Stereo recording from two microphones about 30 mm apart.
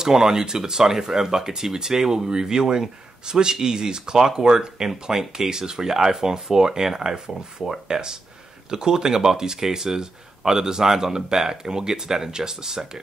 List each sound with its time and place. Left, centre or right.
0.0 s speech: centre